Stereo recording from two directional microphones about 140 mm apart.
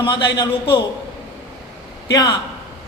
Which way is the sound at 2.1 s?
30° left (ahead or behind).